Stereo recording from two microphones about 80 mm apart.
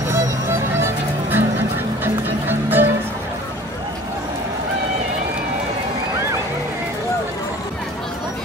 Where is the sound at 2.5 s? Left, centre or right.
Right.